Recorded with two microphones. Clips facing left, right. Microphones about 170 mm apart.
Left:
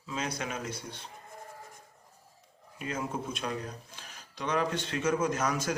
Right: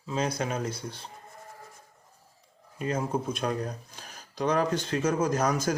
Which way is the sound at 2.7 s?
35° right (ahead or behind).